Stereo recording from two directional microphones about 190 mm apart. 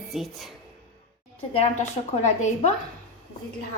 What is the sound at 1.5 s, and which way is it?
A woman's voice, 35° left (ahead or behind).